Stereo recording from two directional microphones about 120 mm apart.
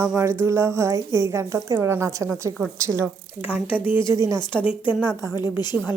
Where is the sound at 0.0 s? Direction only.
25° right (ahead or behind).